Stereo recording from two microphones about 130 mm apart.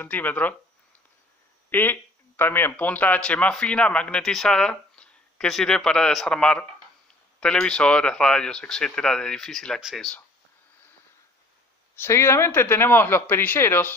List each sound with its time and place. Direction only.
0.0 s speech: 15° left (ahead or behind)
1.7 s speech: 15° left (ahead or behind)
11.9 s speech: 20° left (ahead or behind)